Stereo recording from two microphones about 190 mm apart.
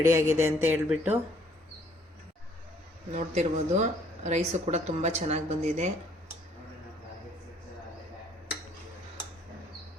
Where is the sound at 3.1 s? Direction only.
35° right (ahead or behind).